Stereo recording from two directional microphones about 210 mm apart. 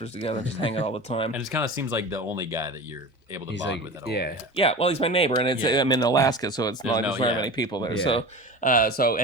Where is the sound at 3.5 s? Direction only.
55° left (ahead or behind).